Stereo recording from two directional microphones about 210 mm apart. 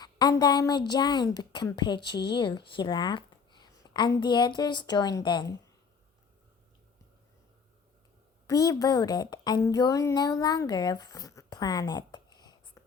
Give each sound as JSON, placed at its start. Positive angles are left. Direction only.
{"t": 0.0, "sound": "speech", "side_deg": 20}
{"t": 8.4, "sound": "a woman's voice", "side_deg": 15}